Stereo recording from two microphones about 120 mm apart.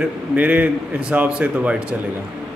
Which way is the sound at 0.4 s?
10° right (ahead or behind).